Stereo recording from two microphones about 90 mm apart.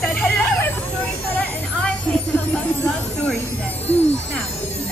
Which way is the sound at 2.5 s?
10° left (ahead or behind).